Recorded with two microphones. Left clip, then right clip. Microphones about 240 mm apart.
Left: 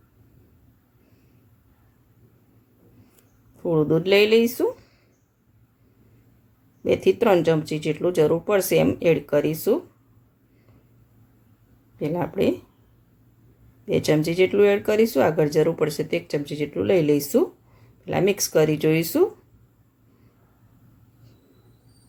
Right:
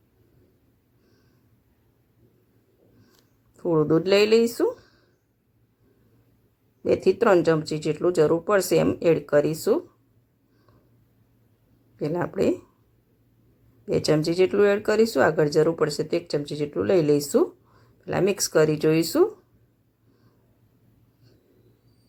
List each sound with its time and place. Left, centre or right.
3.6 s speech: centre
6.8 s speech: centre
11.9 s speech: centre
14.3 s speech: centre